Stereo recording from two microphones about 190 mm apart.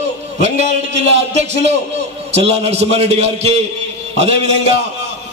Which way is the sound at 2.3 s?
35° right (ahead or behind).